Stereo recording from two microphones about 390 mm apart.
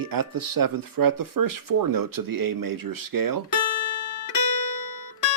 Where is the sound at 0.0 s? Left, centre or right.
Right.